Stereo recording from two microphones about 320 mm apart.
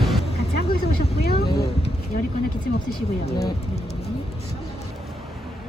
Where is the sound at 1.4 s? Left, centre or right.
Left.